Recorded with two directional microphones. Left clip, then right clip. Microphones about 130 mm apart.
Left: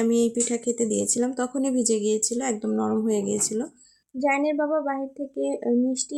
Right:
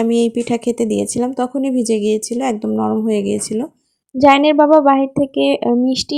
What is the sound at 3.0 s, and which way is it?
Speech, 35° right (ahead or behind).